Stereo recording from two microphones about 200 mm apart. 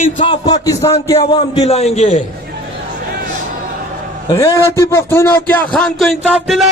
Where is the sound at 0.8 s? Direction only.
30° left (ahead or behind).